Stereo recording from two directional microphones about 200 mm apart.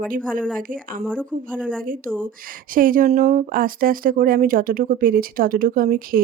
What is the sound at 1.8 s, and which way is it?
Speech, 45° right (ahead or behind).